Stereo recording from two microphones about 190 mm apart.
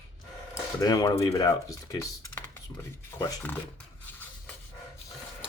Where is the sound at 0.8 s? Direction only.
20° left (ahead or behind).